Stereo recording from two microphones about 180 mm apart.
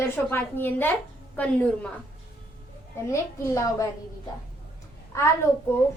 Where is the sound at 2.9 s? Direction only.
15° left (ahead or behind).